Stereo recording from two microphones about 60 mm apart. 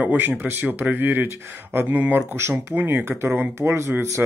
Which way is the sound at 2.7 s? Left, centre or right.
Right.